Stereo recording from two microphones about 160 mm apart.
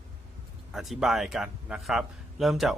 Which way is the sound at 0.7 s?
Centre (ahead or behind).